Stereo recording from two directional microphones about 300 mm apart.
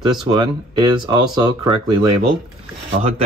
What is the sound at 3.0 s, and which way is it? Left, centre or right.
Speech, right.